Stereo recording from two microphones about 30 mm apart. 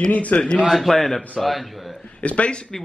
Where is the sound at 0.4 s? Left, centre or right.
Left.